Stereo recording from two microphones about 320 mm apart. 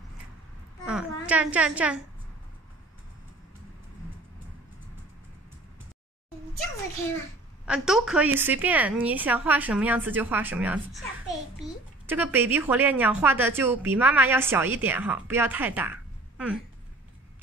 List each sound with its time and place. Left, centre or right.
0.8 s a woman's voice: centre
7.6 s a woman's voice: centre